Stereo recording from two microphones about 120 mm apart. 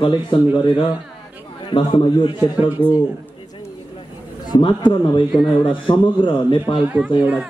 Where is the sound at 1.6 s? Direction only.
40° left (ahead or behind).